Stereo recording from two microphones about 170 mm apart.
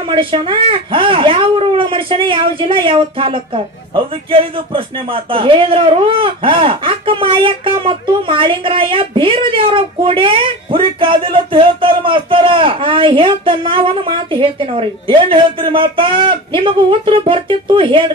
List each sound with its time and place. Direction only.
0.1 s a man's voice: 30° right (ahead or behind)